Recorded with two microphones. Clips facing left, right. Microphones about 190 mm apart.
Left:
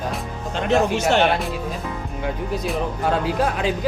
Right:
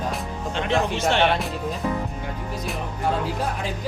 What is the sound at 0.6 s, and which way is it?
Music, 45° left (ahead or behind).